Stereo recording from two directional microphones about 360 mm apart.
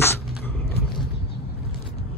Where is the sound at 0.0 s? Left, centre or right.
Centre.